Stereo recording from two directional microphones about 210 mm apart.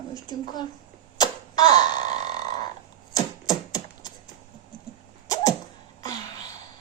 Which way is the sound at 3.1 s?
20° left (ahead or behind).